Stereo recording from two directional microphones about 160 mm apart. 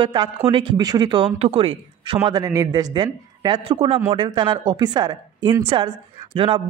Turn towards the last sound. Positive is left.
turn(degrees=-30)  # may be behind; listen again after turning